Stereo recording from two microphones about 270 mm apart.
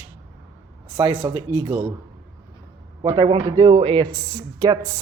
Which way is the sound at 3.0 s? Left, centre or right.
Centre.